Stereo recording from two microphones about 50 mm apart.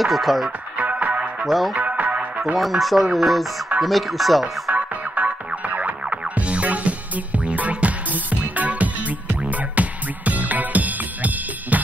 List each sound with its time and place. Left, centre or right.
0.0 s speech: centre
0.7 s music: right
1.4 s speech: centre
1.9 s music: right
2.4 s speech: centre
4.7 s music: right